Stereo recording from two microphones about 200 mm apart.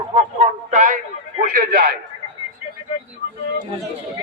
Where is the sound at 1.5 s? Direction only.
50° right (ahead or behind).